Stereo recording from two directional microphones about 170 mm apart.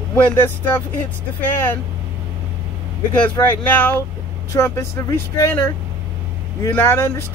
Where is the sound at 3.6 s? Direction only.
10° left (ahead or behind).